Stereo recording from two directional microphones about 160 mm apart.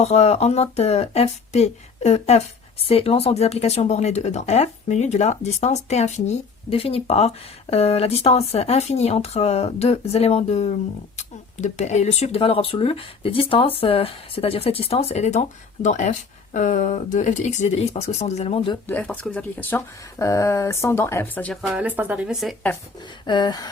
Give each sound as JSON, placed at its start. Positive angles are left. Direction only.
{"t": 0.0, "sound": "speech", "side_deg": 40}
{"t": 18.9, "sound": "speech", "side_deg": 10}
{"t": 21.7, "sound": "speech", "side_deg": -10}
{"t": 23.2, "sound": "a sound", "side_deg": 30}